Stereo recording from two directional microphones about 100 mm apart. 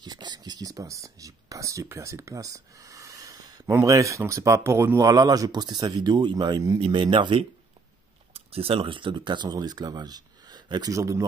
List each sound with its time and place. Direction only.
0.0 s a sound: 45° right (ahead or behind)
3.8 s speech: 35° right (ahead or behind); by 7.4 s 60° right (ahead or behind)
8.3 s speech: 75° right (ahead or behind); by 11.2 s 30° right (ahead or behind)